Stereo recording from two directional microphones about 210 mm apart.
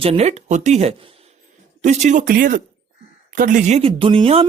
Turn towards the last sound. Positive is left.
turn(degrees=-25)  # may be behind; listen again after turning